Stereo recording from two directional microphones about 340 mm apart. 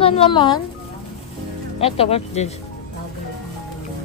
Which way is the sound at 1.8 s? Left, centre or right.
Centre.